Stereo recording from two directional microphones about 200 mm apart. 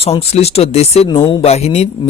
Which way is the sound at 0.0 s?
30° left (ahead or behind).